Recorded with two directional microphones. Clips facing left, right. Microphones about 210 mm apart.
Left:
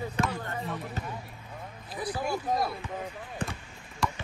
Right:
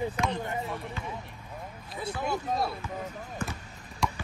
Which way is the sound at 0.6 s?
Centre (ahead or behind).